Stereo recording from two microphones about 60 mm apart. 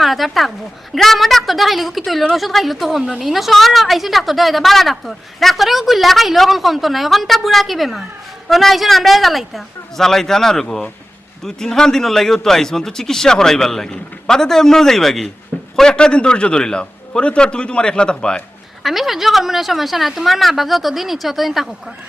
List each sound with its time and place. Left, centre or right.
0.0 s a woman's voice: centre
18.8 s a woman's voice: centre